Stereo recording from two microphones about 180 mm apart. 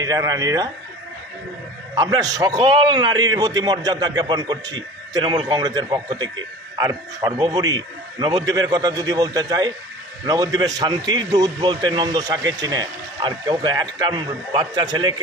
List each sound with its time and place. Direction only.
0.0 s a man's voice: 20° right (ahead or behind)
2.0 s a man's voice: 20° right (ahead or behind)